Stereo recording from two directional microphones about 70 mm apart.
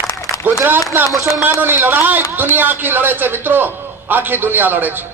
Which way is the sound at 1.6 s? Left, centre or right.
Right.